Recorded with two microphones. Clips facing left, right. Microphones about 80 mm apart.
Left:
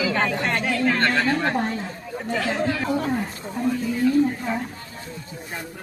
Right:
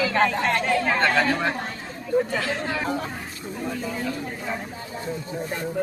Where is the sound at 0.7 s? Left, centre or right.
Centre.